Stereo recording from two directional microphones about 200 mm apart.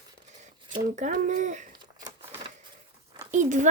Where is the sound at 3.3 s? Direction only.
35° right (ahead or behind).